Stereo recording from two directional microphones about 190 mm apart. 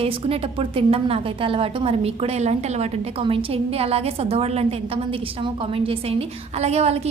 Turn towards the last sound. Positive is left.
turn(degrees=-35)  # may be behind; listen again after turning